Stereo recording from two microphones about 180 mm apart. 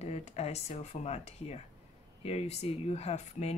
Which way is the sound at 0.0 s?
35° left (ahead or behind).